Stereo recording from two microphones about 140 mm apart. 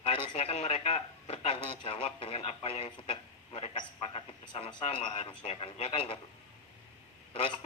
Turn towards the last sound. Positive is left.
turn(degrees=40)  # may be behind; listen again after turning